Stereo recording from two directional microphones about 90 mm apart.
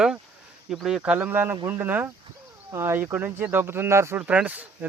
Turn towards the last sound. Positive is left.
turn(degrees=-15)  # may be behind; listen again after turning